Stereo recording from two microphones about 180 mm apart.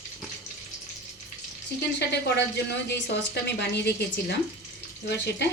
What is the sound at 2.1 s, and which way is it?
A woman's voice, 70° left (ahead or behind).